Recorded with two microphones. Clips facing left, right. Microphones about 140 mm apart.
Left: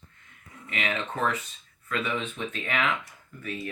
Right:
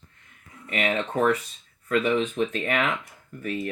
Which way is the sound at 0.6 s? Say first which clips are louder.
Right 5 dB; 40° right (ahead or behind).